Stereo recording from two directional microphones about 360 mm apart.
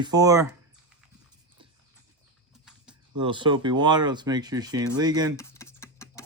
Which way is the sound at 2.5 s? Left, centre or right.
Centre.